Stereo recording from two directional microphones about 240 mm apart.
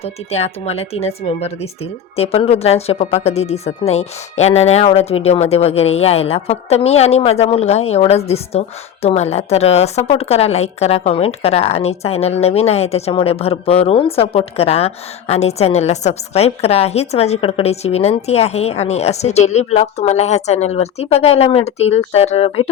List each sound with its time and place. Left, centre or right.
0.0 s speech: left